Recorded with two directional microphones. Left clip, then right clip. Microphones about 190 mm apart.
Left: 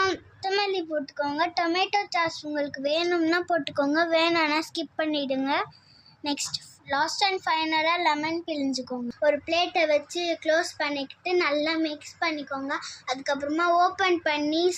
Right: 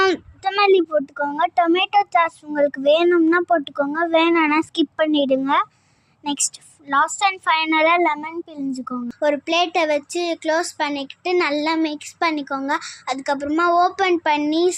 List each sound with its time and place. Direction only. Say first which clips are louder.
0.0 s a woman's voice: right 8 dB; 45° right (ahead or behind)